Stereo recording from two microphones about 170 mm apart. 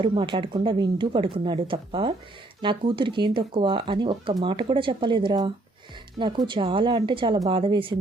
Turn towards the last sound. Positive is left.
turn(degrees=-30)  # may be behind; listen again after turning